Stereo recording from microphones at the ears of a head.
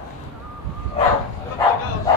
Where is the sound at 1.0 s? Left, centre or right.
Left.